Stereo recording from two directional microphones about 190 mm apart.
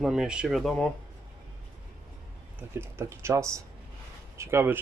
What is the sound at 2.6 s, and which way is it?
Speech, 10° right (ahead or behind).